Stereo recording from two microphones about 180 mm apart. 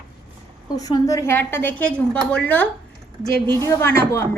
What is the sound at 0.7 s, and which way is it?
A woman's voice, 20° left (ahead or behind).